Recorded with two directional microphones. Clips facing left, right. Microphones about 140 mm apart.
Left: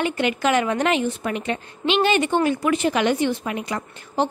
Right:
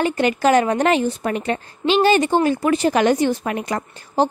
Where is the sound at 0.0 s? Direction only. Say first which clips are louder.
Right 4 dB; 40° right (ahead or behind).